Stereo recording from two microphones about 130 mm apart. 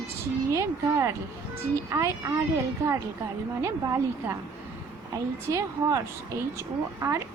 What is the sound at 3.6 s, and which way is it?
Speech, 20° right (ahead or behind).